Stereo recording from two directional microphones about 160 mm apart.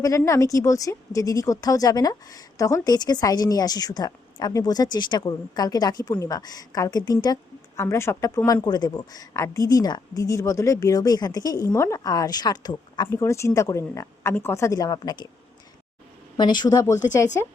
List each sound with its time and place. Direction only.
0.3 s speech: 20° left (ahead or behind)
16.4 s speech: 25° left (ahead or behind)